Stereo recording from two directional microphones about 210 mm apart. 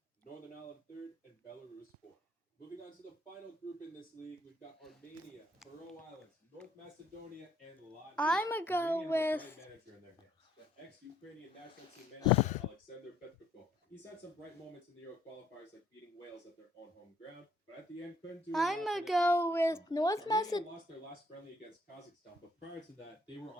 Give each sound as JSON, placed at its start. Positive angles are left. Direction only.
{"t": 8.1, "sound": "speech", "side_deg": 5}
{"t": 12.4, "sound": "speech", "side_deg": 35}
{"t": 18.5, "sound": "speech", "side_deg": 0}